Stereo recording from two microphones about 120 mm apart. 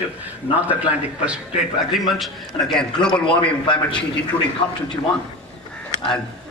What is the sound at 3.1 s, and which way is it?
Speech, 45° left (ahead or behind).